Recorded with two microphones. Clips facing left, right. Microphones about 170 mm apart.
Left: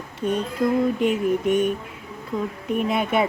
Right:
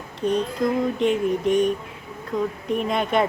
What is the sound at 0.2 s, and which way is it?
Speech, 5° left (ahead or behind).